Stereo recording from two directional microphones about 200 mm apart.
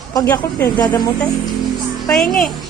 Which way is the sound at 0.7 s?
20° left (ahead or behind).